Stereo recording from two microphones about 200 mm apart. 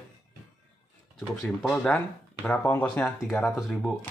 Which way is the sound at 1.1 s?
5° left (ahead or behind).